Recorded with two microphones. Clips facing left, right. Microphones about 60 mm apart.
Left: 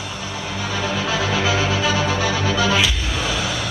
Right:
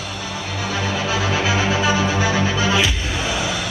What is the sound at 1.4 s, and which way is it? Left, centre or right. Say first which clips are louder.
Music: right 1 dB; right.